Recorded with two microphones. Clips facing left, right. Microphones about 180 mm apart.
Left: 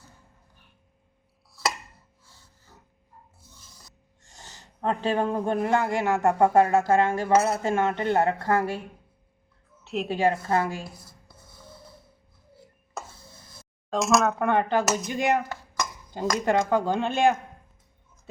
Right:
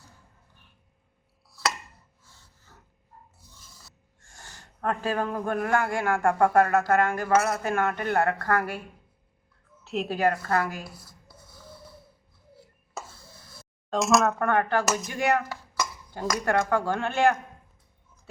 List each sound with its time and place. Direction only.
1.6 s chopping: centre (ahead or behind)
4.8 s a man's voice: 25° left (ahead or behind)
9.8 s a woman's voice: centre (ahead or behind)
10.2 s speech: 25° left (ahead or behind)
13.9 s speech: centre (ahead or behind)
14.4 s speech: 20° left (ahead or behind)